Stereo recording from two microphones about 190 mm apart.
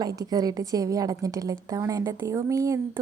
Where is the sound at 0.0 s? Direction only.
20° right (ahead or behind).